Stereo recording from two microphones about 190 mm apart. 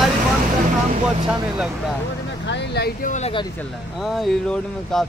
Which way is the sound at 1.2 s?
5° right (ahead or behind).